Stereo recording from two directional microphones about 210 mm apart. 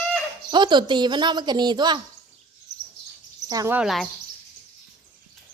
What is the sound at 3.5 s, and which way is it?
Speech, 15° right (ahead or behind).